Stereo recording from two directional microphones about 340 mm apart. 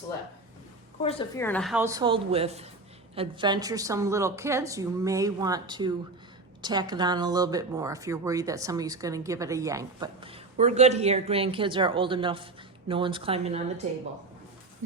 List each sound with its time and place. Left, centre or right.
1.0 s speech: centre